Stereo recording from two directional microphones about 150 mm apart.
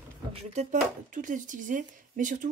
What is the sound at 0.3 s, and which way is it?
Speech, 45° right (ahead or behind).